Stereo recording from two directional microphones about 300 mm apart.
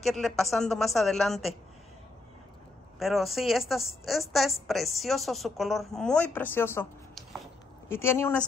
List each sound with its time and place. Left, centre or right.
0.0 s a woman's voice: centre
3.0 s a woman's voice: centre